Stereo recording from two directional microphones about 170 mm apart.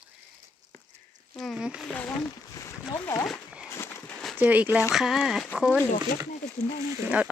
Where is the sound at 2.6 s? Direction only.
15° left (ahead or behind).